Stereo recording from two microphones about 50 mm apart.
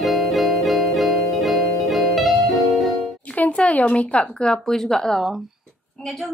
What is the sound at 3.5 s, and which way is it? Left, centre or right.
A woman's voice, left.